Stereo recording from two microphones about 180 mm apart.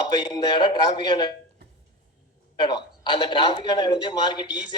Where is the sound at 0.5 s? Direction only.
25° left (ahead or behind).